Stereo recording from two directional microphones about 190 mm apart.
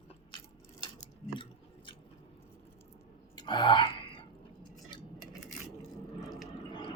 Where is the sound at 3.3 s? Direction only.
25° left (ahead or behind).